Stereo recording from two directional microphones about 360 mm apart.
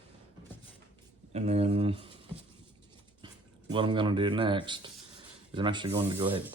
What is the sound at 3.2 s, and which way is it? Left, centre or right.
Speech, centre.